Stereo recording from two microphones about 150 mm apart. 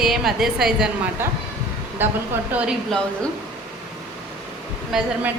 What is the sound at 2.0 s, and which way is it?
Speech, 15° right (ahead or behind).